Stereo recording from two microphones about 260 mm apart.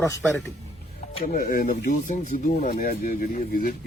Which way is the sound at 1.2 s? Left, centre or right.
Left.